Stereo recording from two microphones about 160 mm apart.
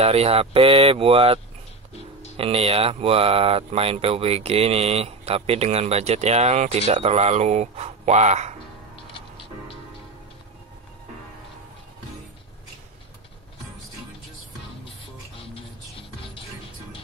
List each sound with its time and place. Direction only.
0.0 s speech: 40° right (ahead or behind)
15.4 s music: 35° left (ahead or behind)